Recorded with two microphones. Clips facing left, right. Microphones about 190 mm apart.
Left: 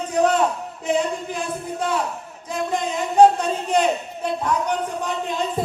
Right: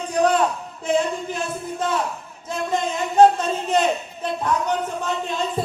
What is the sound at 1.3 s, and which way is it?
Speech, 10° left (ahead or behind).